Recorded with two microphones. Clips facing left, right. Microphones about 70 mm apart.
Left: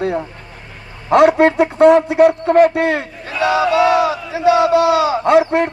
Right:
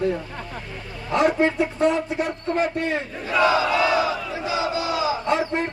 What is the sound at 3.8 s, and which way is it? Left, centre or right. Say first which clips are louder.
Battle cry: left 7 dB; left.